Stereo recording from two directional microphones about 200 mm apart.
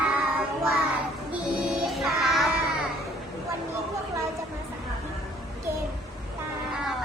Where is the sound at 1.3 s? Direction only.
Centre (ahead or behind).